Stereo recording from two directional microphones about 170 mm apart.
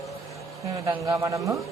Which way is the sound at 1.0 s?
20° right (ahead or behind).